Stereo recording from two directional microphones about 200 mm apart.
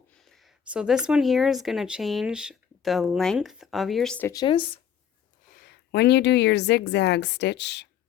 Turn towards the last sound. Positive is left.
turn(degrees=60)  # may be behind; listen again after turning